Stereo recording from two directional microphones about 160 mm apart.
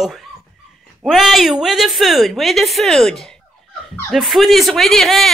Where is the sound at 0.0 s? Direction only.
Centre (ahead or behind).